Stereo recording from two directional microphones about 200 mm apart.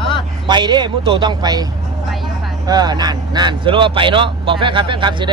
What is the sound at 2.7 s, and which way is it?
A man's voice, 20° right (ahead or behind).